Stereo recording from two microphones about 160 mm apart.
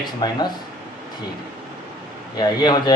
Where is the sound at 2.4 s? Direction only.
25° left (ahead or behind).